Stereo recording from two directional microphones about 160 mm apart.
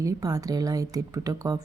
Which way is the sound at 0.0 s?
20° right (ahead or behind).